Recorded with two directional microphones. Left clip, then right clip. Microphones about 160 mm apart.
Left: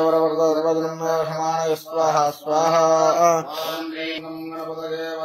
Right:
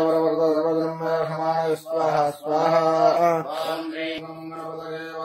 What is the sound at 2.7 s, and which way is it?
Mantra, 10° right (ahead or behind).